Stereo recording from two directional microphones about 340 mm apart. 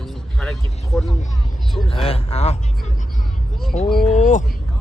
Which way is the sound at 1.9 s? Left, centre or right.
Centre.